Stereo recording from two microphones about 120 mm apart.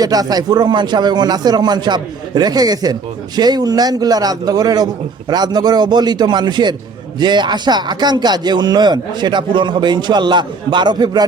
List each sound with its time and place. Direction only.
0.0 s a man's voice: 30° right (ahead or behind)